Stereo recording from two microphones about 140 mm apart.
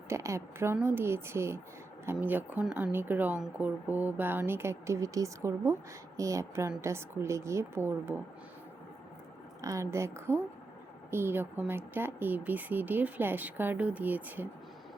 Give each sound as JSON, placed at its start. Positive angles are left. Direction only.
{"t": 0.1, "sound": "a woman's voice", "side_deg": -20}
{"t": 9.6, "sound": "a woman's voice", "side_deg": -20}